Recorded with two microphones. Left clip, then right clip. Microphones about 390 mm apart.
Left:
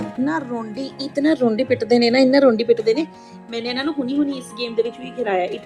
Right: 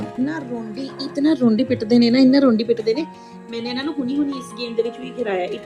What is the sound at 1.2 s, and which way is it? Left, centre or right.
A woman's voice, centre.